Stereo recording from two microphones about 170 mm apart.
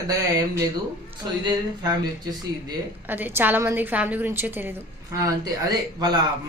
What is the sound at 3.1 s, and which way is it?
A woman's voice, 10° right (ahead or behind).